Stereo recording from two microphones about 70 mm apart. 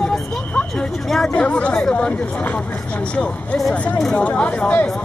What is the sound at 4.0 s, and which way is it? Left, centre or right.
Speech, centre.